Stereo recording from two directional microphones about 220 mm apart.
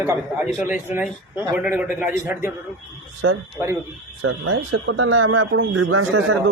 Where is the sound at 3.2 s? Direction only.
65° right (ahead or behind).